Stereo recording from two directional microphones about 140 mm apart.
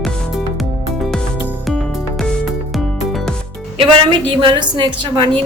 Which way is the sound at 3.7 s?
35° right (ahead or behind).